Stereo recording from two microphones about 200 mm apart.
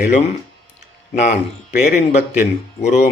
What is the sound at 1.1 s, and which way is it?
Speech, 35° left (ahead or behind).